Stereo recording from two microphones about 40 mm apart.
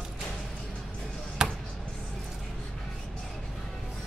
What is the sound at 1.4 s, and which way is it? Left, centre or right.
Basketball bounce, centre.